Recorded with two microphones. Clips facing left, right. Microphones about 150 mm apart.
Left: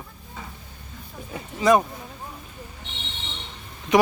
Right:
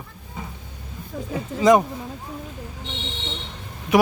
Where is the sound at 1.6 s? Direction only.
20° right (ahead or behind).